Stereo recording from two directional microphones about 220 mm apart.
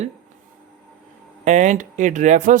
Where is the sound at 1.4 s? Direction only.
35° right (ahead or behind).